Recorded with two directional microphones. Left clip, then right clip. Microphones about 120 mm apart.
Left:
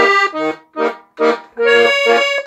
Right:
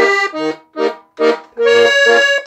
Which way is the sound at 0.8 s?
35° right (ahead or behind).